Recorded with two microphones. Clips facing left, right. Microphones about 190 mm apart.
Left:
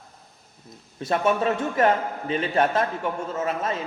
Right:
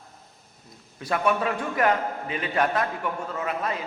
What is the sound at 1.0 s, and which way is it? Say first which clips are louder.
A man's voice: left 2 dB; 25° left (ahead or behind).